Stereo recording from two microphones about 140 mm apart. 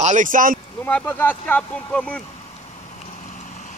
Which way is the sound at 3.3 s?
60° left (ahead or behind).